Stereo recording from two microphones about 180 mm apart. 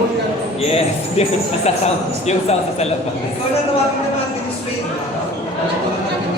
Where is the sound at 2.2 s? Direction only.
35° left (ahead or behind).